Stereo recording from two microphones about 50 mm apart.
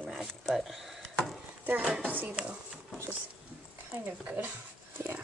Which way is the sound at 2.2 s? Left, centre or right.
Right.